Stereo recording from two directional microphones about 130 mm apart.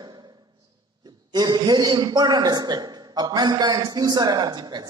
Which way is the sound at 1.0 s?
35° right (ahead or behind).